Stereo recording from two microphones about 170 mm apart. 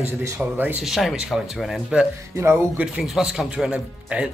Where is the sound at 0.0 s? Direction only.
15° right (ahead or behind).